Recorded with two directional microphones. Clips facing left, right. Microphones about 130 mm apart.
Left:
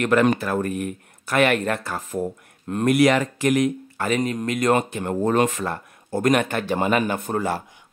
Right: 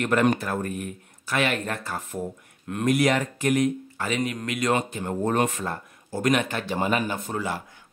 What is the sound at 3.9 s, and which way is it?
Speech, 45° left (ahead or behind).